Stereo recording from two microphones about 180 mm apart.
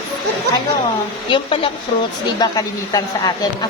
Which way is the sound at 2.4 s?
20° left (ahead or behind).